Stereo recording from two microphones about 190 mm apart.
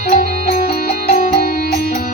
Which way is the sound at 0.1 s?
40° left (ahead or behind).